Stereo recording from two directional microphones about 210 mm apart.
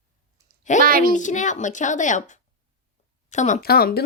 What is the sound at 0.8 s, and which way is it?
Speech, 45° right (ahead or behind).